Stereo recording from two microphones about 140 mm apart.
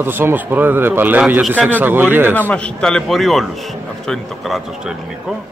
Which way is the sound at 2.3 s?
10° left (ahead or behind).